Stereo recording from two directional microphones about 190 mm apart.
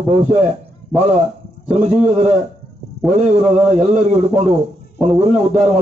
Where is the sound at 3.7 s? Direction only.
35° right (ahead or behind).